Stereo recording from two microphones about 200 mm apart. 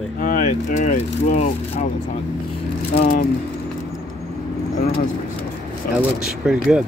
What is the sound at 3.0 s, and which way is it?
Speech, 45° left (ahead or behind).